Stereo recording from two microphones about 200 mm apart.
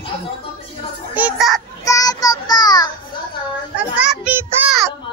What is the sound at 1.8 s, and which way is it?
Child singing, 15° left (ahead or behind).